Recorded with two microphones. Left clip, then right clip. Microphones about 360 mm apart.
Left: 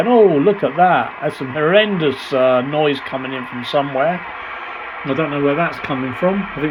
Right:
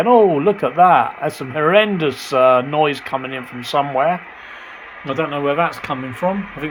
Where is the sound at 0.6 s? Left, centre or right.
Centre.